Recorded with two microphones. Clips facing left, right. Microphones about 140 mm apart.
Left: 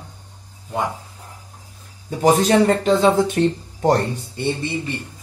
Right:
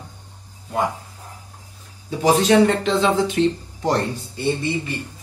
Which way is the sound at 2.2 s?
45° left (ahead or behind).